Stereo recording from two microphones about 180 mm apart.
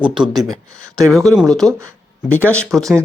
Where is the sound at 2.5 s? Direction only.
5° left (ahead or behind).